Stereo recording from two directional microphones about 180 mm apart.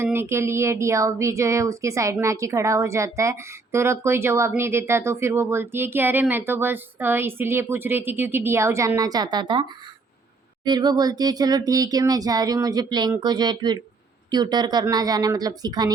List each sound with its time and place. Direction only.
0.0 s a woman's voice: 15° right (ahead or behind)